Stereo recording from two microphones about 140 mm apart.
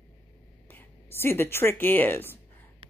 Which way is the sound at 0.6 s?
15° left (ahead or behind).